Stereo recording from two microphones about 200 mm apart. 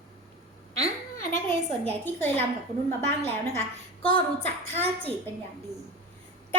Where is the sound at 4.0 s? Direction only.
25° left (ahead or behind).